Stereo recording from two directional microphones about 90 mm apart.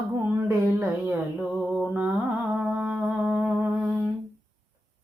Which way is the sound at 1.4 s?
15° right (ahead or behind).